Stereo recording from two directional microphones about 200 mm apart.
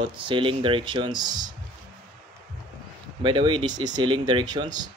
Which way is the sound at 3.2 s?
25° right (ahead or behind).